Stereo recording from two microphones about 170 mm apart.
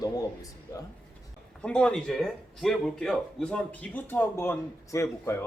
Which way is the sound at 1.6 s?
5° left (ahead or behind).